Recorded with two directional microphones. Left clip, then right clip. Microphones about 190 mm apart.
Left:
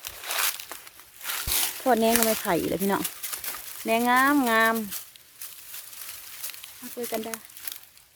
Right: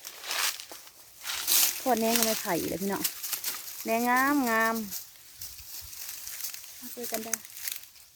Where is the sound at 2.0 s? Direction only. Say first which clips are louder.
Left 4 dB; 5° left (ahead or behind).